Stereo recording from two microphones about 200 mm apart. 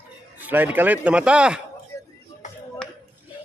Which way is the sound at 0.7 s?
5° right (ahead or behind).